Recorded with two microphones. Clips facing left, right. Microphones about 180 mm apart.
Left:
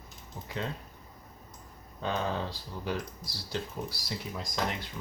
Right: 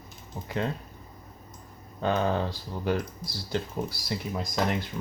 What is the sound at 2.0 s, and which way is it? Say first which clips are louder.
Speech: right 6 dB; 55° right (ahead or behind).